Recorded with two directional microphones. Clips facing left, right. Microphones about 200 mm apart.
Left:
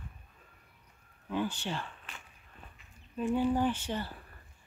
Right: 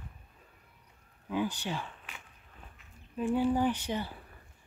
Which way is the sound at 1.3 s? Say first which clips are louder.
Right 1 dB; 10° right (ahead or behind).